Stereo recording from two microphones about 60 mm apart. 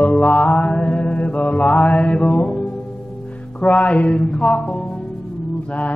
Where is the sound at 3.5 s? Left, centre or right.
Left.